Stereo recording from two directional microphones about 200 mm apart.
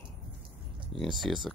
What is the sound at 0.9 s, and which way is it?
Speech, centre (ahead or behind).